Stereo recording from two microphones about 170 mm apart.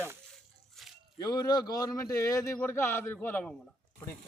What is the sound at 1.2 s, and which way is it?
A man's voice, 25° left (ahead or behind).